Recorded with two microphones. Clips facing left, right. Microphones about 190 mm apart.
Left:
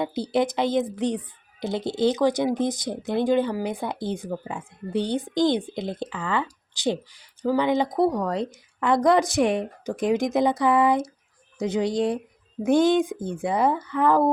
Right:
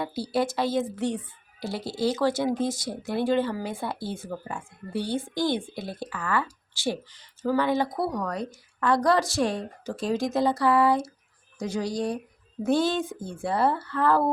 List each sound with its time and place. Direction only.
0.0 s speech: 20° left (ahead or behind)